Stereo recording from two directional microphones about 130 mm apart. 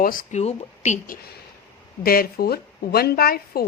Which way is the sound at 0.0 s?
90° left.